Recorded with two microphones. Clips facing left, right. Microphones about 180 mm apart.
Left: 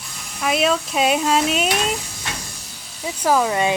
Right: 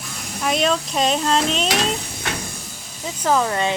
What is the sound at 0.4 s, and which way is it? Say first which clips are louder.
Speech: left 1 dB; 5° left (ahead or behind).